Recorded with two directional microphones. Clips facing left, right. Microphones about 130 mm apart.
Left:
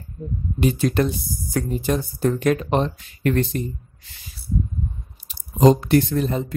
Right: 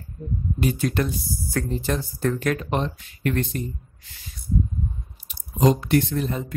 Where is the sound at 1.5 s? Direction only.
15° left (ahead or behind).